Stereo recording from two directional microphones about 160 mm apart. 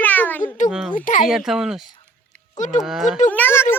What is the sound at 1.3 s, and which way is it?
Speech, 5° right (ahead or behind).